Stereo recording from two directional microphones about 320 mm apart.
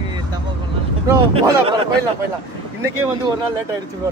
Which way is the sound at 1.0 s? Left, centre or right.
Centre.